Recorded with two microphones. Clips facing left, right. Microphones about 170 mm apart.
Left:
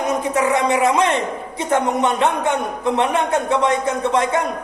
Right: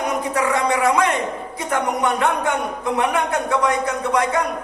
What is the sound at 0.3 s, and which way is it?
A man's voice, 20° left (ahead or behind).